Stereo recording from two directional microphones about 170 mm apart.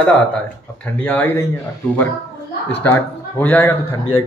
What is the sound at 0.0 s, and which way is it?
Speech, 10° left (ahead or behind).